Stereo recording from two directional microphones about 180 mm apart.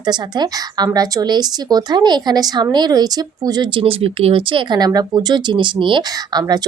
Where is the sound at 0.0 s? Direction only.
25° right (ahead or behind).